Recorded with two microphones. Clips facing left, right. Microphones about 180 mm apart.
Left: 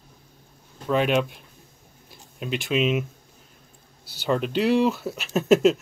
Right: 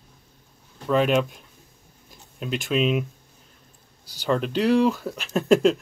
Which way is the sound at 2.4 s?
Centre (ahead or behind).